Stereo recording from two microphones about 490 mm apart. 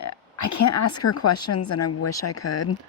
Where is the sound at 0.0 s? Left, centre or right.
Left.